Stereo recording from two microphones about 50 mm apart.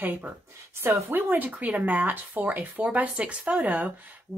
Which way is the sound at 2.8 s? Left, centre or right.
Right.